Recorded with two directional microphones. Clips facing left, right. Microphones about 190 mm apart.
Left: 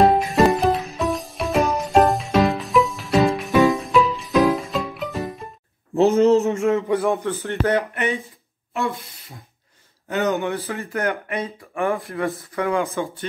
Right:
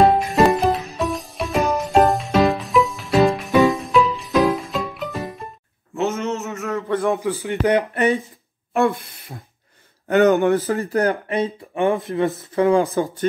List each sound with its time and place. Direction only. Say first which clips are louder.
0.0 s music: right 1 dB; centre (ahead or behind)
5.9 s a sound: left 8 dB; 35° left (ahead or behind)
6.9 s speech: even; centre (ahead or behind); by 7.8 s 15° right (ahead or behind)
7.9 s speech: right 5 dB; 35° right (ahead or behind)
10.0 s speech: right 7 dB; 55° right (ahead or behind); by 13.3 s 40° right (ahead or behind)